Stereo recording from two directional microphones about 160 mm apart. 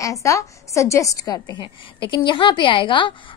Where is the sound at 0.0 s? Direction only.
20° left (ahead or behind).